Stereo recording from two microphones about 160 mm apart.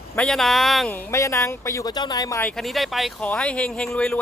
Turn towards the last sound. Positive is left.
turn(degrees=5)  # may be behind; listen again after turning